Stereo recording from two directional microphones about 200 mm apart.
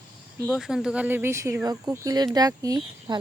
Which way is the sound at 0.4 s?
Centre (ahead or behind).